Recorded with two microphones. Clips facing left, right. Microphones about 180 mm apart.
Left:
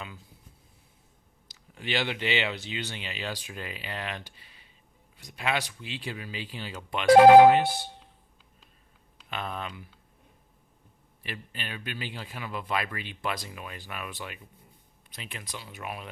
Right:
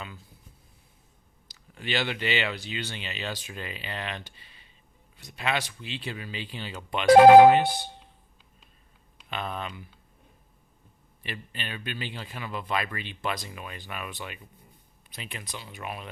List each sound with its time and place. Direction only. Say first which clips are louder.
1.5 s speech: right 1 dB; 15° left (ahead or behind)
7.2 s speech: right 1 dB; 50° right (ahead or behind)
7.5 s a man's voice: right 1 dB; centre (ahead or behind)
9.3 s a man's voice: right 1 dB; centre (ahead or behind)
11.2 s a man's voice: right 1 dB; 5° left (ahead or behind)